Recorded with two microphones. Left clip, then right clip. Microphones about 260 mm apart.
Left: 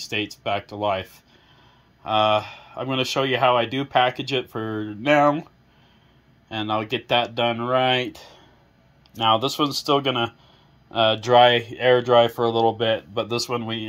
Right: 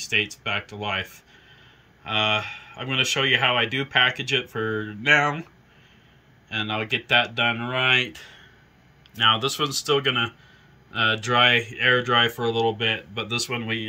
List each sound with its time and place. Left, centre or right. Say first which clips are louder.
0.0 s speech: right 3 dB; centre
6.5 s speech: left 1 dB; centre
9.3 s speech: left 2 dB; centre